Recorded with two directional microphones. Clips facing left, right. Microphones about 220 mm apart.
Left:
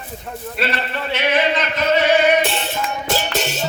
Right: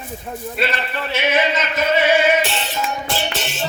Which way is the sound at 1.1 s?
10° right (ahead or behind).